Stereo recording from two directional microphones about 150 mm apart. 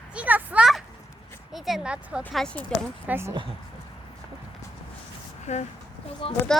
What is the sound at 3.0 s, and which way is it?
Speech, 15° right (ahead or behind).